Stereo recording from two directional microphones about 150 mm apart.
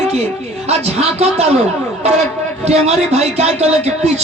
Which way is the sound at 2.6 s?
45° right (ahead or behind).